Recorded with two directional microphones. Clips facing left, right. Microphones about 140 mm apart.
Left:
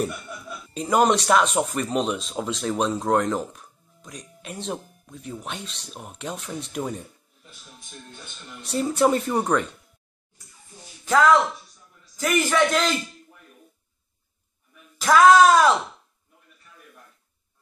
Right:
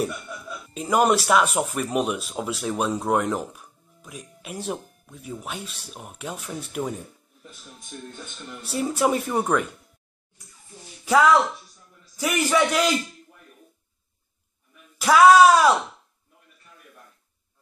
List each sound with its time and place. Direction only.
0.7 s speech: 5° right (ahead or behind)
8.6 s speech: 5° right (ahead or behind)
12.2 s speech: 10° right (ahead or behind)
15.0 s speech: 10° right (ahead or behind)